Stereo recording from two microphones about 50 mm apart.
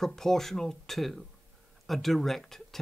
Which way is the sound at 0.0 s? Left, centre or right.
Centre.